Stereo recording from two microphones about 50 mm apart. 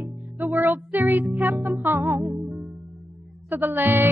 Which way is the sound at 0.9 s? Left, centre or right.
Right.